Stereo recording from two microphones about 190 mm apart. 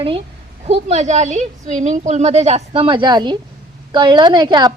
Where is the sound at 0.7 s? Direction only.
35° right (ahead or behind).